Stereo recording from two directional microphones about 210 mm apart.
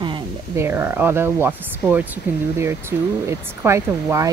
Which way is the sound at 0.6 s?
10° right (ahead or behind).